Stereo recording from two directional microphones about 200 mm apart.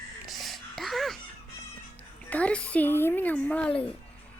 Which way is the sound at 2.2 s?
5° left (ahead or behind).